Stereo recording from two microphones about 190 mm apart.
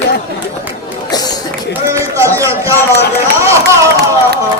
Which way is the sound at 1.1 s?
20° left (ahead or behind).